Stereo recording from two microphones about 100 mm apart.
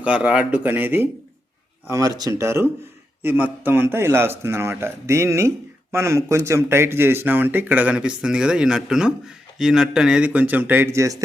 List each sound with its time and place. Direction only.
0.0 s speech: 10° right (ahead or behind)
1.9 s speech: 35° right (ahead or behind)
2.3 s speech: 25° right (ahead or behind)
10.9 s speech: 30° right (ahead or behind)